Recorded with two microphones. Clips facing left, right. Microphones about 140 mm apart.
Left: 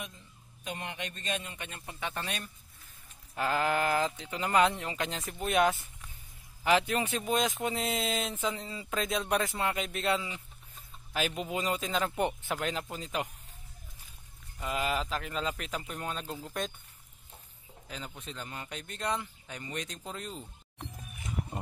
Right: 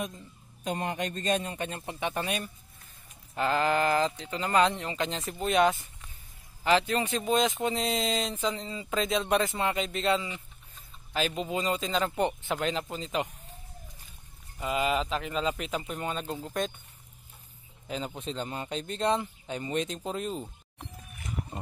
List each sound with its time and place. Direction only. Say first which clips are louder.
0.7 s a man's voice: right 8 dB; 40° right (ahead or behind)
2.0 s speech: right 5 dB; 20° right (ahead or behind)
2.2 s speech: right 6 dB; 5° right (ahead or behind)
3.3 s speech: right 3 dB; 5° left (ahead or behind)
14.6 s speech: right 4 dB; 5° right (ahead or behind)
17.8 s speech: right 8 dB; 20° right (ahead or behind)